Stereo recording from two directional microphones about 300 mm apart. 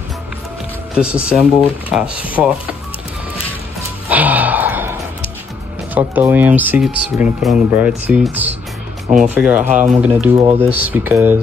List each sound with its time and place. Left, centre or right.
0.9 s speech: centre
4.1 s gasp: centre
5.9 s speech: centre
10.3 s speech: centre
10.9 s speech: centre